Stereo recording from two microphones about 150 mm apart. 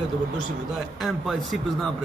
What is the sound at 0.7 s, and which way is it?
A man's voice, centre (ahead or behind).